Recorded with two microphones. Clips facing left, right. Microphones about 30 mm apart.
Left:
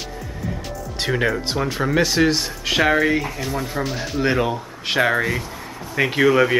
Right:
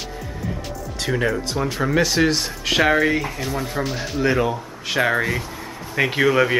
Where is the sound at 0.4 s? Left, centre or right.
Centre.